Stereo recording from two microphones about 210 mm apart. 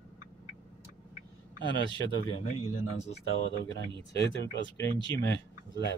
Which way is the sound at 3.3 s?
65° left (ahead or behind).